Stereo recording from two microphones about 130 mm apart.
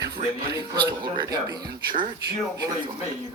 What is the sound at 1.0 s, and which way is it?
Speech, 35° right (ahead or behind).